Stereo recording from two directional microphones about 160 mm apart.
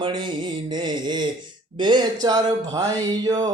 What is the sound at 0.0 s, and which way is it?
Speech, 30° right (ahead or behind).